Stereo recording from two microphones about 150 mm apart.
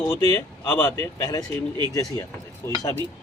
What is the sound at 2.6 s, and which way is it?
Speech, 20° left (ahead or behind).